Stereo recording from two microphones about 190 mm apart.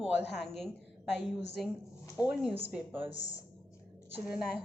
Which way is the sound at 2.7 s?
10° right (ahead or behind).